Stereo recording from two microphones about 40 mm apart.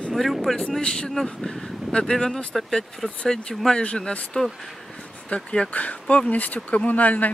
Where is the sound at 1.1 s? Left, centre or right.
Centre.